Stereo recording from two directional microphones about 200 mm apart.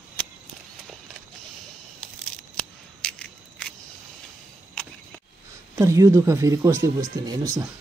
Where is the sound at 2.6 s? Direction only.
5° left (ahead or behind).